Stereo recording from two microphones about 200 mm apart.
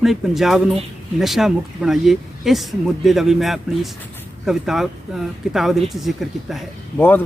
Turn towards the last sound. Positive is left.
turn(degrees=10)  # may be behind; listen again after turning